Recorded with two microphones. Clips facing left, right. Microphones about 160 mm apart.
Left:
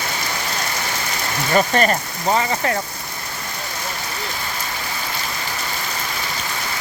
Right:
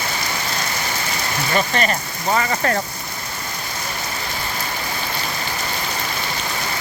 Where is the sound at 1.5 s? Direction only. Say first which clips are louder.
Left 4 dB; 40° left (ahead or behind).